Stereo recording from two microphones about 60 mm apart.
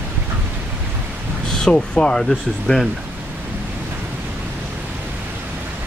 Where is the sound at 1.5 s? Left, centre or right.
Centre.